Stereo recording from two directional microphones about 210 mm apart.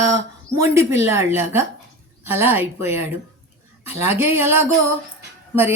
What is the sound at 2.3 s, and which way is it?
A woman's voice, 10° right (ahead or behind).